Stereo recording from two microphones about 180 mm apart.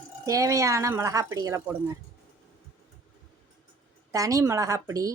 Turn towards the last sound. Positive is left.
turn(degrees=-20)  # may be behind; listen again after turning